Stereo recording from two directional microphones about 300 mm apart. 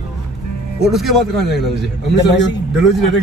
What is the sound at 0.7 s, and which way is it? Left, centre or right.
Snicker, centre.